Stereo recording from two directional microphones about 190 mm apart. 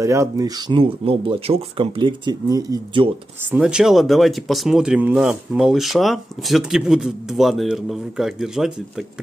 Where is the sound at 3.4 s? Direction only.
5° right (ahead or behind).